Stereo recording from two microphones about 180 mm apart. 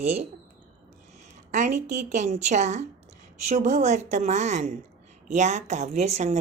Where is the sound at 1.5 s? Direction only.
40° right (ahead or behind).